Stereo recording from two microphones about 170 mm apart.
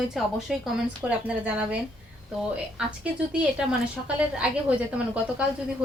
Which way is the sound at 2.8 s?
5° right (ahead or behind).